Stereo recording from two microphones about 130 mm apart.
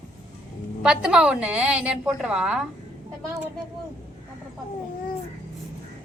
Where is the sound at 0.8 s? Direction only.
5° right (ahead or behind).